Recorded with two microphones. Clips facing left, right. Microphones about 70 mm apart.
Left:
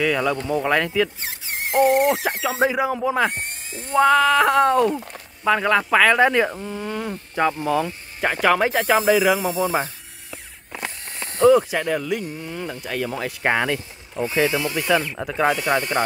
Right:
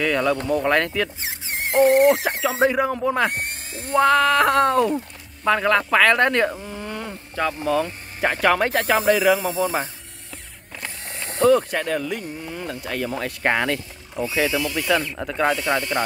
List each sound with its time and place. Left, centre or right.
0.0 s speech: centre
3.3 s a sound: right
3.9 s speech: centre
7.3 s speech: centre
9.4 s a man's voice: centre
11.4 s speech: centre
14.4 s a man's voice: left
14.8 s speech: centre